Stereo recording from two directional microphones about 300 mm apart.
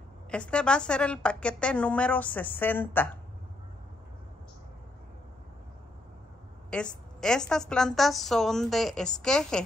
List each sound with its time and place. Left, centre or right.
0.3 s a woman's voice: centre
6.7 s a woman's voice: centre